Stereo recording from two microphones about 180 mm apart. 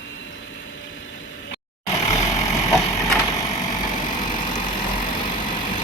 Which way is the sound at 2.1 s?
15° left (ahead or behind).